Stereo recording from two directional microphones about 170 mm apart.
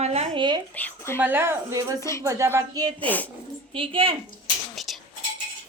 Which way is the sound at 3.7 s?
30° right (ahead or behind).